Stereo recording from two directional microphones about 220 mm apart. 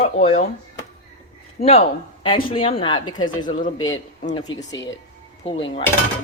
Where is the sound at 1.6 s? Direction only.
45° left (ahead or behind).